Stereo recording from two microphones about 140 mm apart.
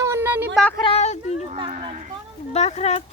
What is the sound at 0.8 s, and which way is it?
Speech, 50° left (ahead or behind).